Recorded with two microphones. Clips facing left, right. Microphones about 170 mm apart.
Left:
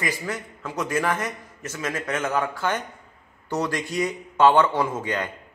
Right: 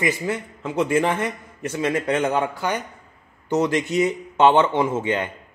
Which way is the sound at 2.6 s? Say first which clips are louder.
Right 1 dB; 10° right (ahead or behind).